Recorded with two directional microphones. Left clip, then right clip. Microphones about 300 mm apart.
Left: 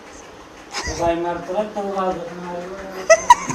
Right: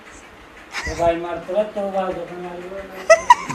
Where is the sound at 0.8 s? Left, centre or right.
Centre.